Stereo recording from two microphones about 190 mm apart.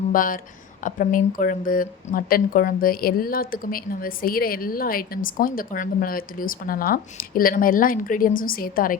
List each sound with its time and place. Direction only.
0.1 s speech: 45° left (ahead or behind)